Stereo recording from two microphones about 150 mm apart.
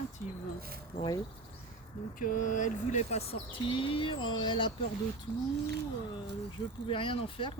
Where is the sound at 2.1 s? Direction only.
60° left (ahead or behind); by 4.7 s 30° left (ahead or behind).